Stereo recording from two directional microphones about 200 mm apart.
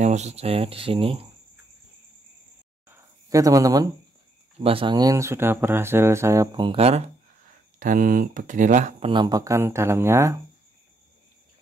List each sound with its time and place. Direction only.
0.0 s speech: 35° right (ahead or behind)
2.9 s a sound: 15° right (ahead or behind)
4.6 s speech: 30° right (ahead or behind)
7.8 s speech: 40° right (ahead or behind)
9.1 s speech: 20° right (ahead or behind)